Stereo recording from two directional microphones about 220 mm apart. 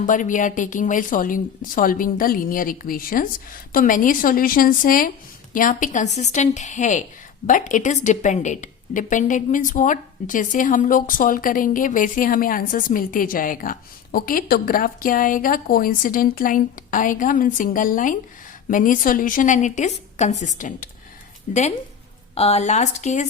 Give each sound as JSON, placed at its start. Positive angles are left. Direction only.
{"t": 0.0, "sound": "a woman's voice", "side_deg": 35}